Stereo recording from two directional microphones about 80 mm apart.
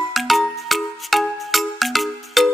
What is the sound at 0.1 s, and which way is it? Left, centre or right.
Music, centre.